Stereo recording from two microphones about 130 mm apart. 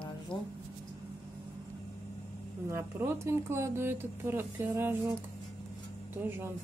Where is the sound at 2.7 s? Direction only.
20° right (ahead or behind).